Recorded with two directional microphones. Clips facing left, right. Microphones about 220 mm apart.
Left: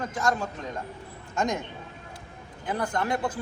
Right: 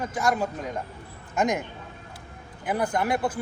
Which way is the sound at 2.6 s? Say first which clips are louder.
Right 3 dB; 15° right (ahead or behind).